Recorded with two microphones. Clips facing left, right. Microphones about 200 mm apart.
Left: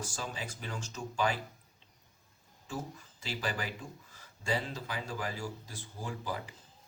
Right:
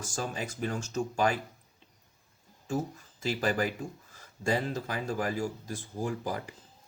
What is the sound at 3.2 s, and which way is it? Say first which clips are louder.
Speech: right 8 dB; 45° right (ahead or behind).